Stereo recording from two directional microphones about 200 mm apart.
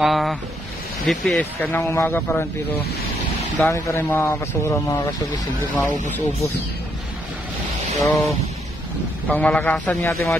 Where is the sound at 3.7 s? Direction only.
15° left (ahead or behind).